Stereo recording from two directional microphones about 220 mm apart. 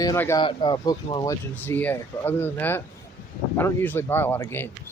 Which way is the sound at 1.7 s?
10° left (ahead or behind).